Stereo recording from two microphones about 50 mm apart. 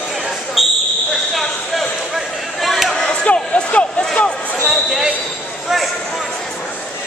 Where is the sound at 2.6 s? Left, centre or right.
Centre.